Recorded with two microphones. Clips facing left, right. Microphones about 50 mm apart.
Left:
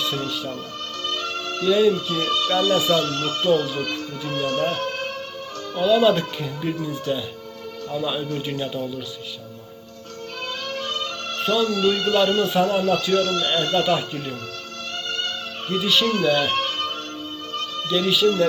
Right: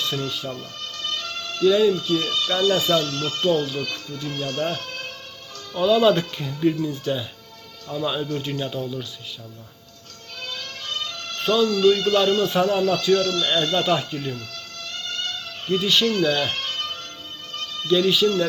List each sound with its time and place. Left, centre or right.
1.0 s music: left
1.6 s speech: centre
1.9 s speech: left
2.7 s speech: centre
3.0 s speech: left
5.7 s speech: centre
10.7 s music: left
11.3 s music: centre
11.6 s speech: left
15.0 s music: left
15.7 s speech: centre
16.5 s music: left
17.8 s speech: centre